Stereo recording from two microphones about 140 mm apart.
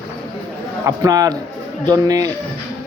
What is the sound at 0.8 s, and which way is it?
Speech, 25° right (ahead or behind).